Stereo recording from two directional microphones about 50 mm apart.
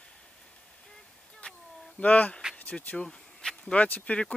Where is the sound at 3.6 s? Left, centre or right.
Left.